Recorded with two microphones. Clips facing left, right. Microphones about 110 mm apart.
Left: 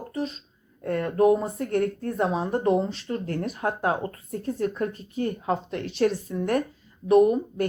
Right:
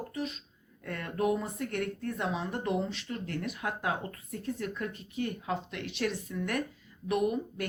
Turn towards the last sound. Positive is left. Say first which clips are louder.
# left 11 dB
turn(degrees=35)  # may be behind; listen again after turning